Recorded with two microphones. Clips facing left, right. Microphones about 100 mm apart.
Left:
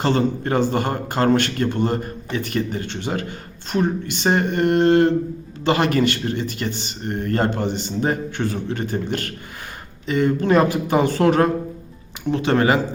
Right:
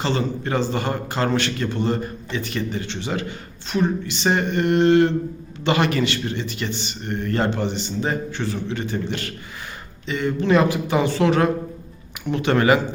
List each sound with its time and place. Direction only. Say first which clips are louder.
0.0 s a man's voice: left 4 dB; 50° left (ahead or behind)
12.3 s speech: even; 30° left (ahead or behind)